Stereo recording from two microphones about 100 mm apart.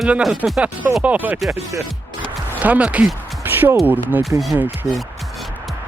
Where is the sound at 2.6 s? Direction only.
15° right (ahead or behind).